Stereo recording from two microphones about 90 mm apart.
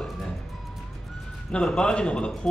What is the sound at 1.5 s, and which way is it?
A man's voice, 10° left (ahead or behind).